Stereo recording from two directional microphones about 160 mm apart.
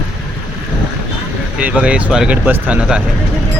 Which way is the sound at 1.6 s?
5° right (ahead or behind).